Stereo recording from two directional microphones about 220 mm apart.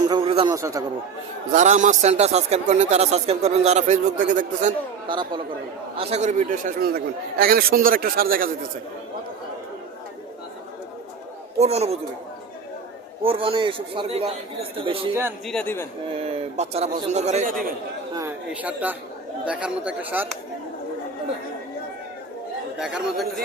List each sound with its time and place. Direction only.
0.0 s a sound: 20° right (ahead or behind)
0.5 s a man's voice: 15° right (ahead or behind)
1.5 s speech: 35° right (ahead or behind)
5.0 s a man's voice: 20° right (ahead or behind); by 8.4 s 40° right (ahead or behind)
11.5 s a man's voice: 30° right (ahead or behind)
13.2 s a man's voice: 25° right (ahead or behind)
15.4 s a man's voice: 5° left (ahead or behind)
16.2 s a man's voice: 30° right (ahead or behind)
18.1 s speech: 10° right (ahead or behind)
22.8 s speech: 5° right (ahead or behind)